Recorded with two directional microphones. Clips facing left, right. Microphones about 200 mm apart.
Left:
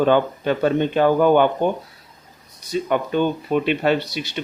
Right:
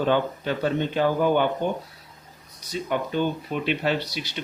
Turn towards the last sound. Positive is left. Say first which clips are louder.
# left 5 dB
turn(degrees=55)  # may be behind; listen again after turning